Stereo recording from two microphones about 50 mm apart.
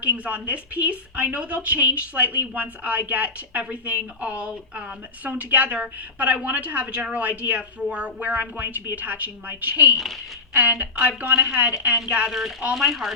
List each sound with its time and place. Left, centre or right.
0.0 s a woman's voice: right
5.2 s a woman's voice: right
11.3 s a woman's voice: centre
12.3 s speech: centre